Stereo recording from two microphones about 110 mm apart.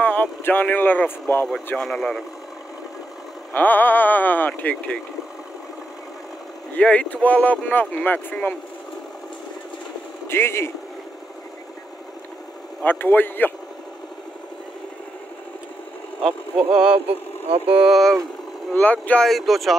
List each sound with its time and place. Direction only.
0.0 s speech: 15° left (ahead or behind)
1.8 s speech: 5° left (ahead or behind)
3.5 s speech: 15° left (ahead or behind)
6.7 s speech: 10° left (ahead or behind)
10.2 s speech: 20° left (ahead or behind)
12.8 s speech: 20° left (ahead or behind)
16.2 s speech: 5° right (ahead or behind)
18.7 s speech: 15° left (ahead or behind)
19.2 s speech: centre (ahead or behind)